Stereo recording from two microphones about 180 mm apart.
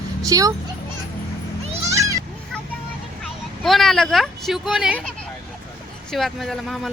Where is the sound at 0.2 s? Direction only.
20° right (ahead or behind).